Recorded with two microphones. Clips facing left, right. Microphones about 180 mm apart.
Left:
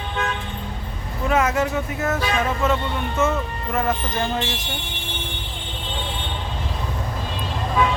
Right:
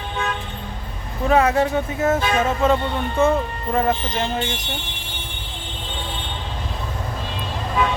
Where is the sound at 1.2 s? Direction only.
35° right (ahead or behind).